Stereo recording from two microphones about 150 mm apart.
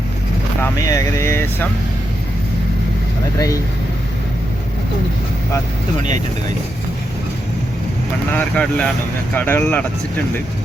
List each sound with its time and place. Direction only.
0.6 s speech: 20° left (ahead or behind)
8.3 s speech: 10° left (ahead or behind)